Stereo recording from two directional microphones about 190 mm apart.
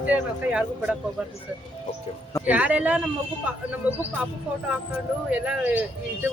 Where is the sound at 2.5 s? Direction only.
5° right (ahead or behind).